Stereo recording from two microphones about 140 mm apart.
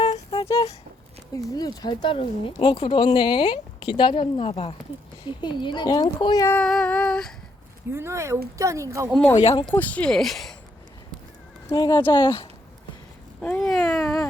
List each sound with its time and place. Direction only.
0.1 s a sound: 45° left (ahead or behind)
1.3 s speech: 25° left (ahead or behind); by 4.7 s 45° left (ahead or behind)
5.4 s speech: 35° left (ahead or behind)
6.5 s female singing: 5° left (ahead or behind)
7.9 s speech: 20° right (ahead or behind)
9.7 s speech: 10° left (ahead or behind)
11.7 s speech: 30° left (ahead or behind)
13.7 s cat: centre (ahead or behind)